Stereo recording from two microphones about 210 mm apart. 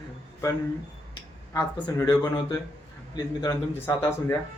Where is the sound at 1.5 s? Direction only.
15° left (ahead or behind).